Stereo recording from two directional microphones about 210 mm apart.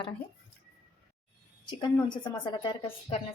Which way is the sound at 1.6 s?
20° left (ahead or behind).